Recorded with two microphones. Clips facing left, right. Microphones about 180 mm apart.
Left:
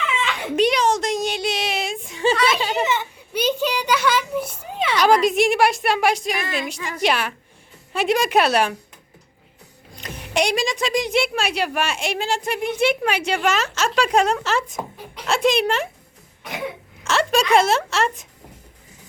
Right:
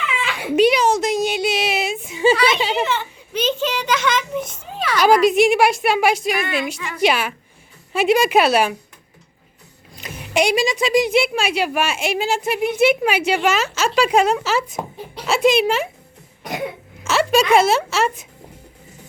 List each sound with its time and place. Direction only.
0.1 s a sound: 5° right (ahead or behind)
3.0 s a child's voice: 10° left (ahead or behind)
4.6 s a sound: 20° left (ahead or behind)
4.9 s a woman's voice: centre (ahead or behind)
9.9 s a woman's voice: 5° right (ahead or behind)
17.0 s a woman's voice: 5° right (ahead or behind)